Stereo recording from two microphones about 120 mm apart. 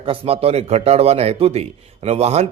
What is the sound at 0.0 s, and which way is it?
A man's voice, 50° right (ahead or behind).